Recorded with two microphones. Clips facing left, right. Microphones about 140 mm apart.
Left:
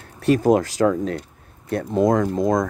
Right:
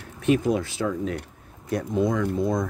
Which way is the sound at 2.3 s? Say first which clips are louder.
Left 5 dB; 90° left.